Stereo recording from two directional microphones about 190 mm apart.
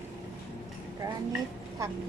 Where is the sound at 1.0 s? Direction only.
15° right (ahead or behind).